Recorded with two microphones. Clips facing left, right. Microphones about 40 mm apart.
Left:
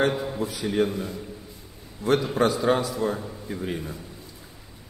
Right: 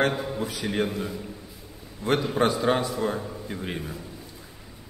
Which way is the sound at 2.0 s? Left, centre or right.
Right.